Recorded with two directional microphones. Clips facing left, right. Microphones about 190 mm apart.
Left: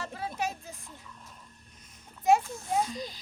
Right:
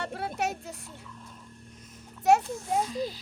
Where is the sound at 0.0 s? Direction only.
65° right (ahead or behind).